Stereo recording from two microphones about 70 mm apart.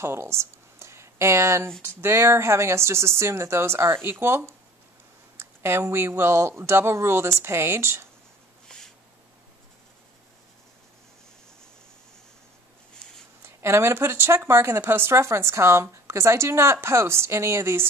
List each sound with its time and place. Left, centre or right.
0.0 s a woman's voice: right
5.6 s a woman's voice: right
8.7 s a sound: centre
13.4 s a woman's voice: right